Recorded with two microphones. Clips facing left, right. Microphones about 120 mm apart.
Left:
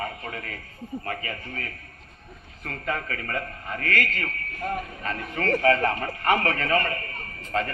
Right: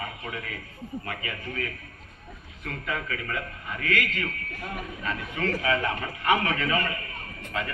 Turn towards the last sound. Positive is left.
turn(degrees=45)  # may be behind; listen again after turning